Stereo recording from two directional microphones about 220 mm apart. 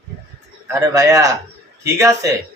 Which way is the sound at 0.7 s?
15° right (ahead or behind).